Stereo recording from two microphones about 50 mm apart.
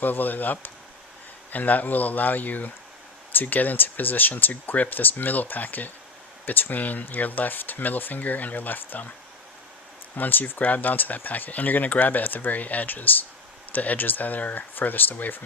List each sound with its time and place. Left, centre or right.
0.0 s speech: left
10.2 s speech: left